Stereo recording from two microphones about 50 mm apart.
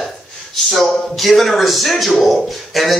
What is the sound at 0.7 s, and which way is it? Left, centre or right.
A man's voice, centre.